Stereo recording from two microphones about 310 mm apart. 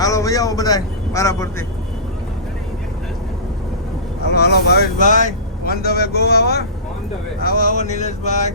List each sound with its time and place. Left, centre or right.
0.0 s a man's voice: centre
4.4 s mantra: left
5.6 s a man's voice: left
7.4 s mantra: left